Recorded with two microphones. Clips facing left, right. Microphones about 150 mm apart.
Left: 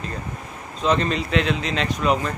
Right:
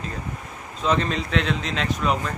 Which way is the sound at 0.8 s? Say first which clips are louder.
Left 2 dB; centre (ahead or behind).